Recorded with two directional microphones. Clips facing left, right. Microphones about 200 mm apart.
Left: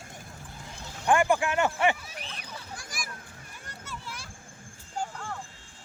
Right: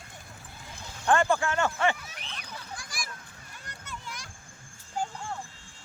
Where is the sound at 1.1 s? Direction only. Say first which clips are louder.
Left 1 dB; 15° left (ahead or behind).